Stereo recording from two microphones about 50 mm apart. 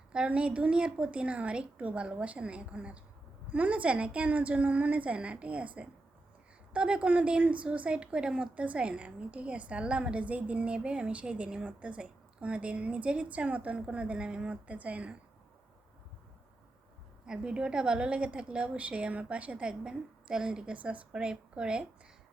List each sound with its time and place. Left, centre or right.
0.1 s a woman's voice: right
17.2 s a woman's voice: centre
21.1 s a woman's voice: centre